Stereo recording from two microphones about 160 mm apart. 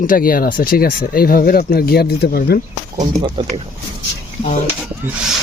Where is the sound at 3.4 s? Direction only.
35° right (ahead or behind).